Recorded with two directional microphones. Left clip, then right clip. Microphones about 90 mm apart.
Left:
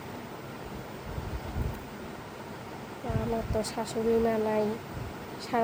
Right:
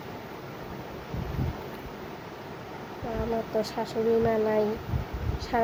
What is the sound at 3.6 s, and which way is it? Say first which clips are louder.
Speech: right 2 dB; 20° left (ahead or behind).